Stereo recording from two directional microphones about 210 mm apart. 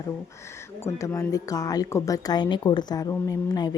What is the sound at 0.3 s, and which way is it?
Speech, 15° left (ahead or behind).